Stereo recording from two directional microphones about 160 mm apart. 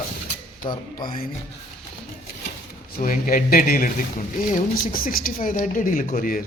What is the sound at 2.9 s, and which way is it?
Speech, 60° left (ahead or behind).